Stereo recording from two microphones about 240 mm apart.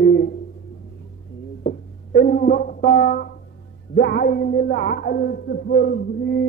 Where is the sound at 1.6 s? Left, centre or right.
Left.